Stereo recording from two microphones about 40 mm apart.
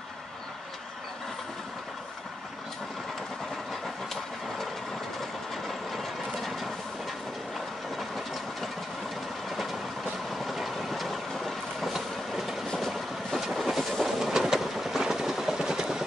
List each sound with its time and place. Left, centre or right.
3.8 s vehicle: centre
5.7 s ratchet: centre
9.5 s train: centre
10.3 s vehicle: centre
11.9 s train: centre
12.7 s train: centre
13.4 s vehicle: centre
14.0 s train: centre
14.5 s vehicle: centre